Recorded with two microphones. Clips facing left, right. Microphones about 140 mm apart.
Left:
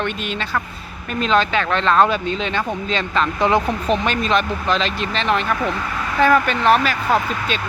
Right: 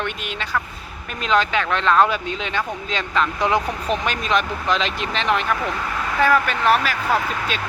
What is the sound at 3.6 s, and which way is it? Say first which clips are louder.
Speech: left 4 dB; 30° left (ahead or behind).